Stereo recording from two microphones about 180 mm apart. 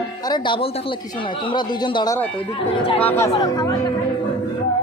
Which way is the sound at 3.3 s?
20° left (ahead or behind).